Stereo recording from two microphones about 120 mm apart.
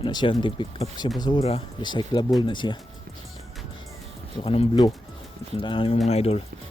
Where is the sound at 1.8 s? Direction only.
40° left (ahead or behind).